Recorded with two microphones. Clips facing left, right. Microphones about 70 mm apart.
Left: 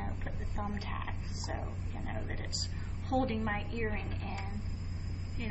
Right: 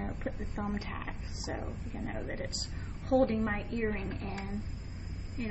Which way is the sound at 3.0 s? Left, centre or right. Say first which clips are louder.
Right 5 dB; right.